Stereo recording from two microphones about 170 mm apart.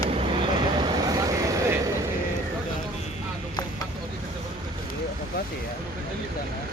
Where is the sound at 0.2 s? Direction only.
30° right (ahead or behind).